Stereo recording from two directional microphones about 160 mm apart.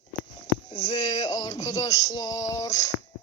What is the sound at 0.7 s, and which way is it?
Music, 20° left (ahead or behind).